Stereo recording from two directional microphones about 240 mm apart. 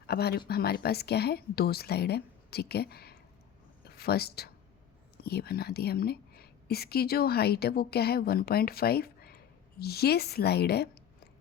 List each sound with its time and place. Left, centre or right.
0.1 s a woman's voice: left